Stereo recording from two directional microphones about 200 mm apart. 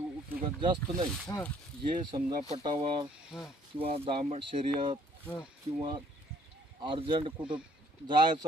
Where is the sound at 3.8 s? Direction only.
30° right (ahead or behind).